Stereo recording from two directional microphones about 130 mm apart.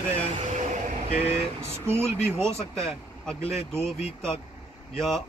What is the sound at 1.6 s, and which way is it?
Speech, 20° right (ahead or behind).